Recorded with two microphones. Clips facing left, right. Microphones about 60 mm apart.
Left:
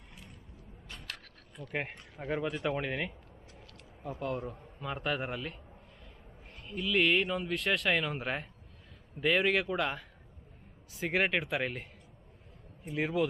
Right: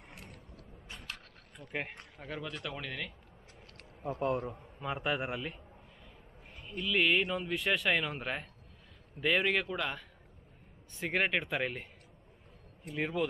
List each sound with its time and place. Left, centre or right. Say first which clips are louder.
0.1 s vehicle: right 2 dB; right
1.7 s speech: left 2 dB; centre
4.5 s a man's voice: right 1 dB; centre
6.7 s speech: left 1 dB; centre